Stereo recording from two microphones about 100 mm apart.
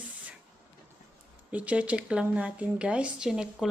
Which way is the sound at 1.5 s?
15° right (ahead or behind).